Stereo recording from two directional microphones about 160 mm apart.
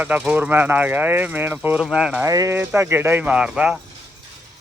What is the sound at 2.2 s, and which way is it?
Speech, 20° right (ahead or behind).